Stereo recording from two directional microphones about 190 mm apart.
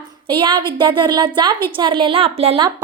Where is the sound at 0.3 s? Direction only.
25° right (ahead or behind).